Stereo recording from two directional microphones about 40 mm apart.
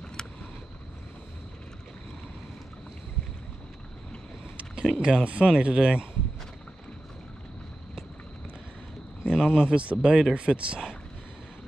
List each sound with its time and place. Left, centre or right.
0.2 s vehicle: centre
4.8 s speech: right
9.3 s speech: centre